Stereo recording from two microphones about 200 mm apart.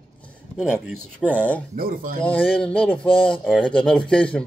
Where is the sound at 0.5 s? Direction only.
5° right (ahead or behind).